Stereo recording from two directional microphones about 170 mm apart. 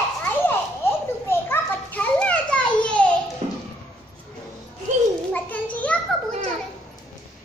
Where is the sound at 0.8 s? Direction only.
15° left (ahead or behind).